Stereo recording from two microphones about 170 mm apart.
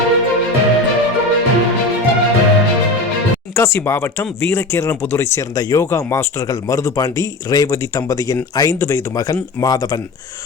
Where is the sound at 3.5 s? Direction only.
15° left (ahead or behind).